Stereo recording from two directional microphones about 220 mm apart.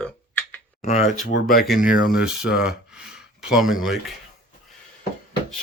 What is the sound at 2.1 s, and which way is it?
Speech, 5° right (ahead or behind).